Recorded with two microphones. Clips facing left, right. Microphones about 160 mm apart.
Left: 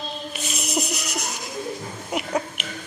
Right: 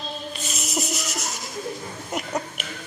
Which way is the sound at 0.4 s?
Centre (ahead or behind).